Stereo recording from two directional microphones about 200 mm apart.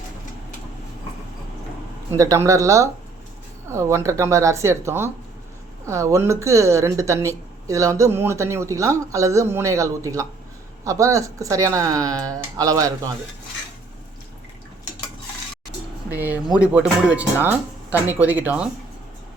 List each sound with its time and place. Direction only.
2.1 s a woman's voice: 15° right (ahead or behind)
16.0 s a woman's voice: 10° right (ahead or behind)